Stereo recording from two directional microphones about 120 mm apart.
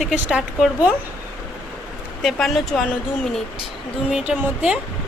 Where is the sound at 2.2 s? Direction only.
Centre (ahead or behind).